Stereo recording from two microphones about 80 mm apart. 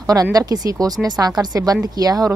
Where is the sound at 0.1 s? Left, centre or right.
Right.